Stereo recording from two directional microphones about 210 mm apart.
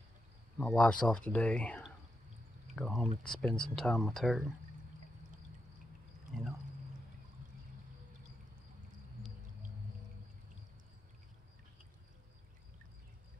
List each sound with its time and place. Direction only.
0.6 s speech: 5° left (ahead or behind)